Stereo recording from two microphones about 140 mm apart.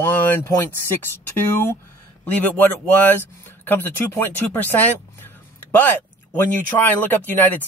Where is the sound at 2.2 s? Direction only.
15° left (ahead or behind).